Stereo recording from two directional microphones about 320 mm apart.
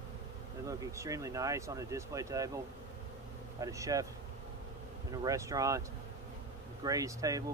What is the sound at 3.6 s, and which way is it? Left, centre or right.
Speech, centre.